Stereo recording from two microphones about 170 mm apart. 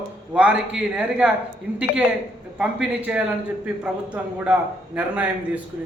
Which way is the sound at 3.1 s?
5° right (ahead or behind).